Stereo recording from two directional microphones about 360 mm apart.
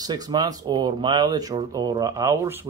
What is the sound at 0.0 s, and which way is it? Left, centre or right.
Speech, centre.